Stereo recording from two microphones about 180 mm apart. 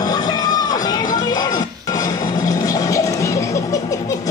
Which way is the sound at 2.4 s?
20° left (ahead or behind).